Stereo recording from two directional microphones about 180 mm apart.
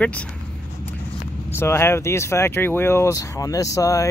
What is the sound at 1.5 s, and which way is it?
Speech, 15° left (ahead or behind).